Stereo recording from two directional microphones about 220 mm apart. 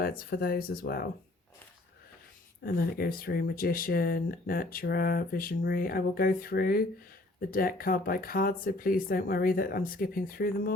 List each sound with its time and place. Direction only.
0.0 s speech: 40° left (ahead or behind)
2.6 s speech: 40° left (ahead or behind)